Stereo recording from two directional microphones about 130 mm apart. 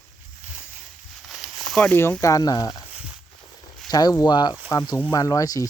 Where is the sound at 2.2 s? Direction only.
25° left (ahead or behind).